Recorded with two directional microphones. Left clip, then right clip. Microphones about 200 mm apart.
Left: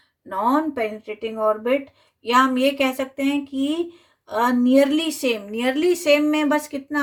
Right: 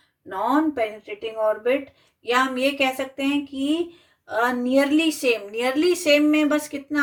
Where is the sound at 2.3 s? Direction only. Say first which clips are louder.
Left 4 dB; 45° left (ahead or behind).